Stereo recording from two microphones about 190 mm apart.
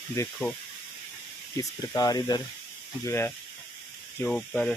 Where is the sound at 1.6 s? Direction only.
20° left (ahead or behind); by 4.7 s 5° left (ahead or behind).